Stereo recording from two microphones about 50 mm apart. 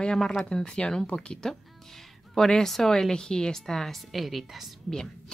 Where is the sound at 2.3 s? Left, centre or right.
Centre.